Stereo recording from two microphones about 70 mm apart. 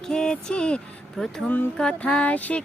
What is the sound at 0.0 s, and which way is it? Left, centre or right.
Music, centre.